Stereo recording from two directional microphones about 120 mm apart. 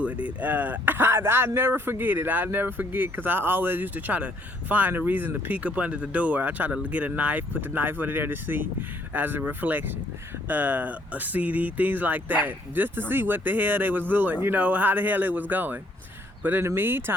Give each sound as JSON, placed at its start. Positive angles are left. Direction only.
{"t": 0.0, "sound": "speech", "side_deg": -10}